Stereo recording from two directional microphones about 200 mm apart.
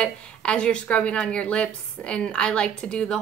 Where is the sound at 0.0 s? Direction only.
5° left (ahead or behind).